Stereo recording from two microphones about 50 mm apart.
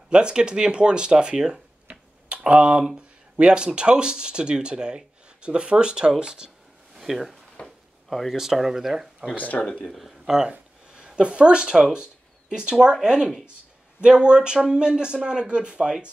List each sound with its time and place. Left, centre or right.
0.1 s speech: centre
7.0 s speech: centre
7.6 s a sound: centre
8.1 s speech: centre
8.4 s speech: centre
9.3 s speech: left
9.8 s speech: centre